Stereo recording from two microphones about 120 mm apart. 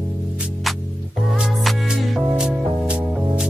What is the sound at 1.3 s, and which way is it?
Music, 5° right (ahead or behind).